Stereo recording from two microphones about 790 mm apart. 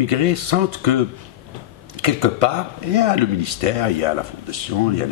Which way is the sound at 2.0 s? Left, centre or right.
Right.